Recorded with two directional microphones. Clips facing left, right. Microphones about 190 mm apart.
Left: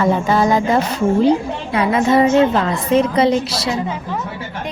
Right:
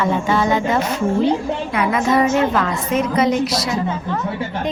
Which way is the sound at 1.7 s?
30° left (ahead or behind).